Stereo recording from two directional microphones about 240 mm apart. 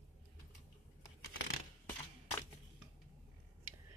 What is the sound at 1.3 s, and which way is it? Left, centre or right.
Tearing, left.